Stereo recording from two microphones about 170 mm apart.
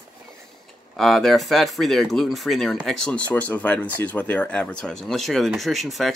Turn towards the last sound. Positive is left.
turn(degrees=0)  # may be behind; listen again after turning